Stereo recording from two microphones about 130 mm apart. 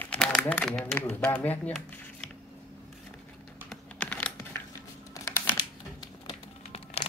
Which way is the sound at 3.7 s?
10° left (ahead or behind).